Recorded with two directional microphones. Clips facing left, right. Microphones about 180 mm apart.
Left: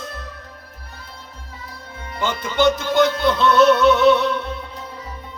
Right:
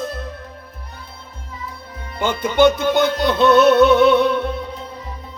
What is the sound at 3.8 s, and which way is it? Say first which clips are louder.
Music: right 2 dB; 55° right (ahead or behind).